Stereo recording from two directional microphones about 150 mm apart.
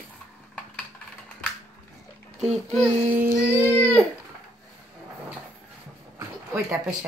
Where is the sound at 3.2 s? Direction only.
15° right (ahead or behind).